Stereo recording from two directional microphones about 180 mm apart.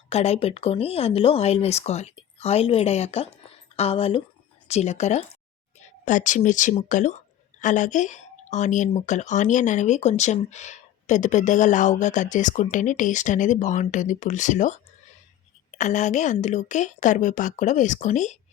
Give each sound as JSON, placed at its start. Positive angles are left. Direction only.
{"t": 0.1, "sound": "speech", "side_deg": 35}
{"t": 15.8, "sound": "speech", "side_deg": 40}